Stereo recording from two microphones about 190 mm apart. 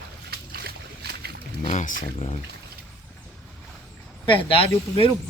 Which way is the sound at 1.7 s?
40° left (ahead or behind).